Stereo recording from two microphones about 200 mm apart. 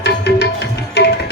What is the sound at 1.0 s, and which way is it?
Tabla, 55° left (ahead or behind).